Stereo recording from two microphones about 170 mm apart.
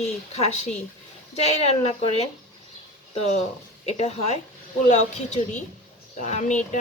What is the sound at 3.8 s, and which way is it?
A woman's voice, 40° left (ahead or behind).